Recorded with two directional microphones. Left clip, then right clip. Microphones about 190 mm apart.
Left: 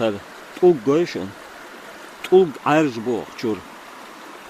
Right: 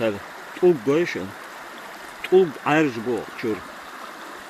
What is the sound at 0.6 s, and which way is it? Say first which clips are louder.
Speech: left 3 dB; 20° left (ahead or behind).